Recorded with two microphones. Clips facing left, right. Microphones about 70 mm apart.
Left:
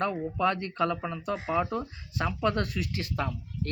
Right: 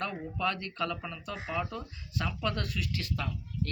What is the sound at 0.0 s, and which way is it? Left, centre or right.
Speech, left.